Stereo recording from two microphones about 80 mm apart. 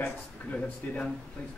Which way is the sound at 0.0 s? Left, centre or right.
Centre.